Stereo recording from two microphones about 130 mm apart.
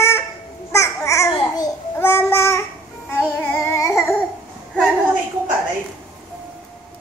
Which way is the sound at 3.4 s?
15° left (ahead or behind).